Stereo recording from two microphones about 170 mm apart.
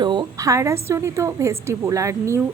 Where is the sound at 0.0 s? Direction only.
25° right (ahead or behind).